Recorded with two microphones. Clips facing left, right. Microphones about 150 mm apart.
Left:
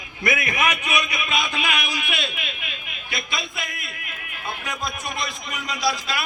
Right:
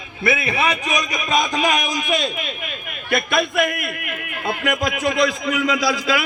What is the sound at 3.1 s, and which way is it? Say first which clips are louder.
A man's voice: right 12 dB; 55° right (ahead or behind).